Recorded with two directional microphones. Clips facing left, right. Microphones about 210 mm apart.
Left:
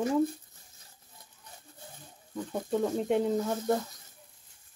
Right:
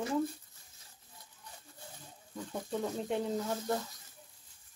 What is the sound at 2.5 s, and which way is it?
Speech, 55° left (ahead or behind).